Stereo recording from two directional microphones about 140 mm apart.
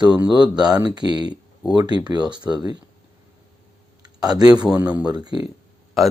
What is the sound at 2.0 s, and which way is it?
Speech, 30° right (ahead or behind).